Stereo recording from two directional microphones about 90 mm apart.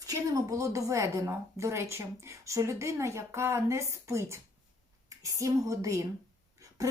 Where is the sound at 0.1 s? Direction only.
40° right (ahead or behind).